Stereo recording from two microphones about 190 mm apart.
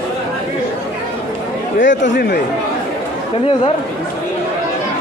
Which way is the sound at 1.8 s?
75° left (ahead or behind).